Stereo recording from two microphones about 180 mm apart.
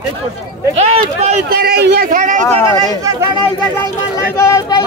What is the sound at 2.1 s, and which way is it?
Speech, 45° right (ahead or behind).